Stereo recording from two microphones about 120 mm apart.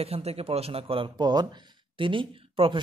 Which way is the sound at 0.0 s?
60° right (ahead or behind).